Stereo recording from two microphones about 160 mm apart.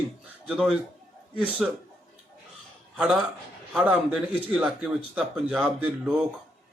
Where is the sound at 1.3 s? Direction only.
5° right (ahead or behind).